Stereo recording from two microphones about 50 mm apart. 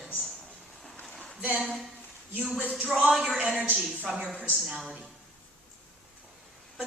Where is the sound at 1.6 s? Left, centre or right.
Centre.